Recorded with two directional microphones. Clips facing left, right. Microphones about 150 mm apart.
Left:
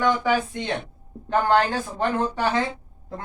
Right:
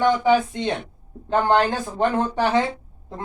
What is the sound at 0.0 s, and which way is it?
Speech, 25° right (ahead or behind).